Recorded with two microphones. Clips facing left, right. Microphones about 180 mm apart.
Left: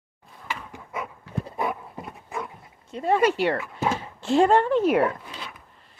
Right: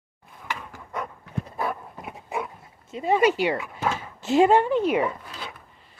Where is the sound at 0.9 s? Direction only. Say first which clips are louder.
Right 1 dB; 5° left (ahead or behind).